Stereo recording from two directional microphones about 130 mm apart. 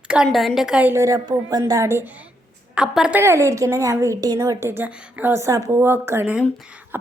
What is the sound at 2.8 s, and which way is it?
Speech, 5° right (ahead or behind).